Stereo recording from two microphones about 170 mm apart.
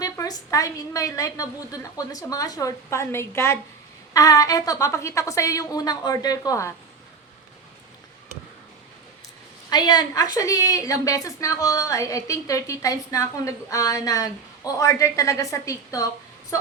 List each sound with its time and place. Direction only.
0.0 s a woman's voice: 20° left (ahead or behind)
9.6 s a woman's voice: 25° left (ahead or behind)